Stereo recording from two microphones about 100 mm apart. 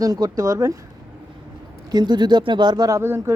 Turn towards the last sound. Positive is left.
turn(degrees=-25)  # may be behind; listen again after turning